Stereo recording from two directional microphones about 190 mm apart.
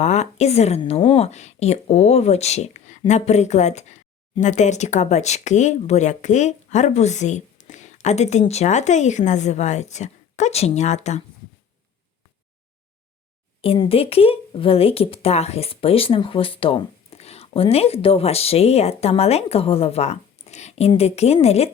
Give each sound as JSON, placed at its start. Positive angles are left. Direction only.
{"t": 0.0, "sound": "speech", "side_deg": 35}
{"t": 13.6, "sound": "speech", "side_deg": 30}